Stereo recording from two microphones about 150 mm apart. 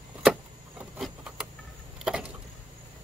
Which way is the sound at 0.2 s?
Centre (ahead or behind).